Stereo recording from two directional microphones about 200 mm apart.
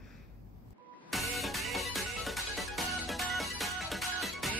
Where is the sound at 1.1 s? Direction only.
Centre (ahead or behind).